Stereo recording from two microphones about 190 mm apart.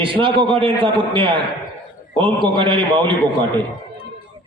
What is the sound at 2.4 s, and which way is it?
Speech, 25° right (ahead or behind).